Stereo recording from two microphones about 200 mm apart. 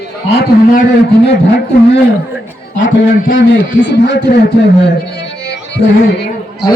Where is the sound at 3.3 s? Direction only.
65° left (ahead or behind).